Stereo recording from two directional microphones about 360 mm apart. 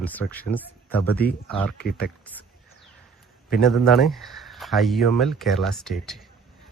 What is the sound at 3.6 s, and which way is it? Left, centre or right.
Speech, centre.